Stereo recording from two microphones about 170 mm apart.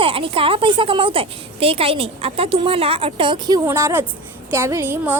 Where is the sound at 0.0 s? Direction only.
30° right (ahead or behind).